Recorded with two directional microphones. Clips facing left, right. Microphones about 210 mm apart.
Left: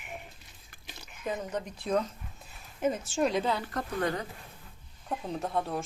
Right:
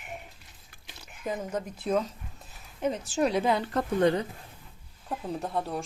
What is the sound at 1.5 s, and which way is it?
Speech, 5° right (ahead or behind).